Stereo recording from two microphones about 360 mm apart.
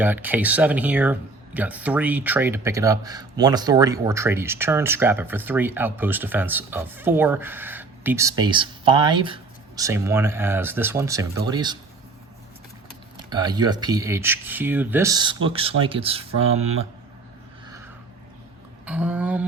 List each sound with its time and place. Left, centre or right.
0.0 s speech: centre
13.1 s speech: centre
18.9 s speech: centre